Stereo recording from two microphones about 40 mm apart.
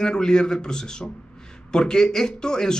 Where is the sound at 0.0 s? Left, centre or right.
Centre.